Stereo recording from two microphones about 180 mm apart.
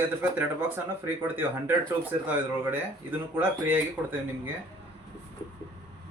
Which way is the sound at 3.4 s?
10° right (ahead or behind).